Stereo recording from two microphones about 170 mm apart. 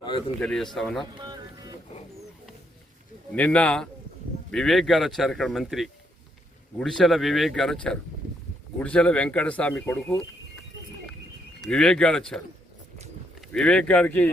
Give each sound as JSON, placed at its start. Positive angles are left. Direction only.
{"t": 0.3, "sound": "speech", "side_deg": 5}
{"t": 1.1, "sound": "music", "side_deg": -25}
{"t": 3.3, "sound": "speech", "side_deg": 10}
{"t": 11.6, "sound": "speech", "side_deg": 5}
{"t": 13.5, "sound": "speech", "side_deg": 5}